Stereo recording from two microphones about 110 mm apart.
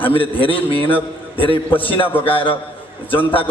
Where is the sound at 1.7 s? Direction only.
55° left (ahead or behind).